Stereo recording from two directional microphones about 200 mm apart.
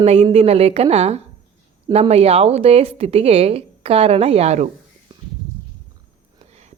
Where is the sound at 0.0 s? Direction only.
30° right (ahead or behind).